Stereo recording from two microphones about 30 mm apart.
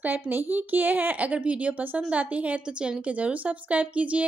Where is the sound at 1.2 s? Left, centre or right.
Right.